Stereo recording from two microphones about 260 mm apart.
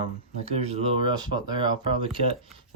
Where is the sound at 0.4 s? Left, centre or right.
Right.